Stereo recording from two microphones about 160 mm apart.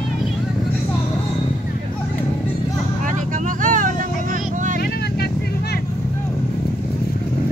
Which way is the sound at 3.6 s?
55° right (ahead or behind).